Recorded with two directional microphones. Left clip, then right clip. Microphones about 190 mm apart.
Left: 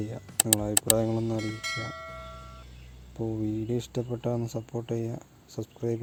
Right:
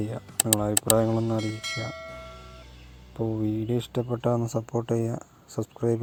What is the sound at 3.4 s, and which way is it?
Speech, 10° right (ahead or behind).